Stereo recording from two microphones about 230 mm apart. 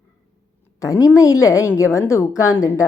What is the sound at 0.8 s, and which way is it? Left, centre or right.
A woman's voice, centre.